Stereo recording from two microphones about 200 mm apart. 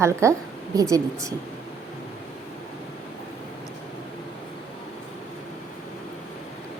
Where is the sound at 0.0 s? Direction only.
15° right (ahead or behind).